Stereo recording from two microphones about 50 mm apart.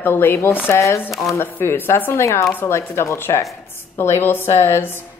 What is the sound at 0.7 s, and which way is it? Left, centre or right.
Speech, left.